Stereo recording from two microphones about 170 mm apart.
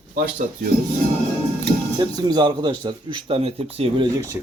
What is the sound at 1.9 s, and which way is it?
Speech, 25° right (ahead or behind).